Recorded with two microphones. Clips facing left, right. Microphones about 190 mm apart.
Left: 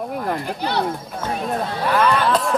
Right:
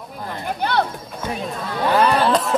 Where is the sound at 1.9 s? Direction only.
30° right (ahead or behind).